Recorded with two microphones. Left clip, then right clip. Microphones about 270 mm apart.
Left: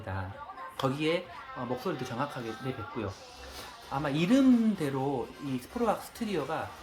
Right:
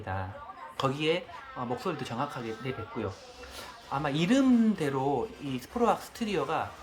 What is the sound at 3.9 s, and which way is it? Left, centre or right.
Speech, centre.